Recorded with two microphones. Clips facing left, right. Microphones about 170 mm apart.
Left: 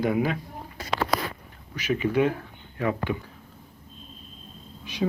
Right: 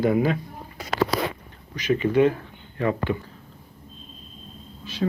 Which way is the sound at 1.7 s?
10° left (ahead or behind).